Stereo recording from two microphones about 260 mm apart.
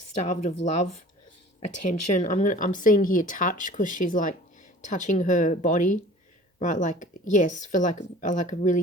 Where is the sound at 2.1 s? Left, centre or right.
Left.